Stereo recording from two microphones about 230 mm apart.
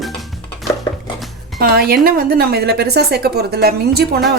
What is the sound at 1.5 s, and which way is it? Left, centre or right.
A woman's voice, right.